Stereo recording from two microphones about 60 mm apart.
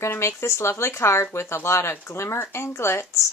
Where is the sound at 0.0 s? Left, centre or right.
Left.